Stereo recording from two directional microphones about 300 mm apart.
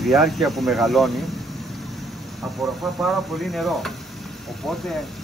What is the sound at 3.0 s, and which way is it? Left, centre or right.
Speech, centre.